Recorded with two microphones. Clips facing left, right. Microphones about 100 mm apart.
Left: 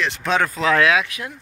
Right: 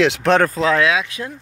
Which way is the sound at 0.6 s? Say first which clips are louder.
Right 1 dB; 20° right (ahead or behind).